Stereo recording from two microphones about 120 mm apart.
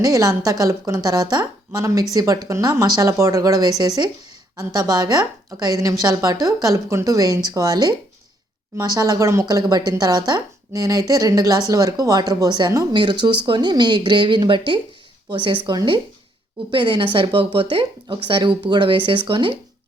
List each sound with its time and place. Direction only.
0.0 s a woman's voice: 30° right (ahead or behind); by 19.5 s 45° right (ahead or behind)